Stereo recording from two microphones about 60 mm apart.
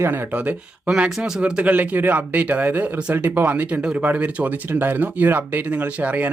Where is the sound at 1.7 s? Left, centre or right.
Right.